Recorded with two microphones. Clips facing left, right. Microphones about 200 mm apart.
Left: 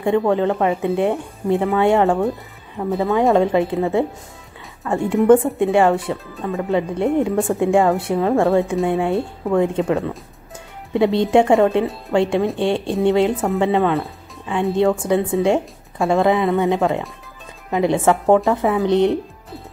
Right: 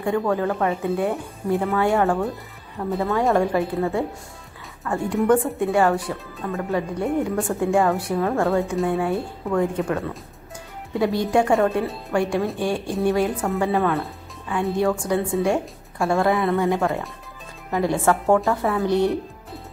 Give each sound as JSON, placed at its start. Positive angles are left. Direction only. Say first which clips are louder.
{"t": 0.0, "sound": "speech", "louder": "left 5 dB", "side_deg": 25}